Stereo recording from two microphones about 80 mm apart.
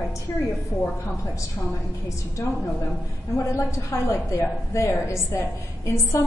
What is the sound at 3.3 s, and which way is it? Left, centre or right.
A woman's voice, left.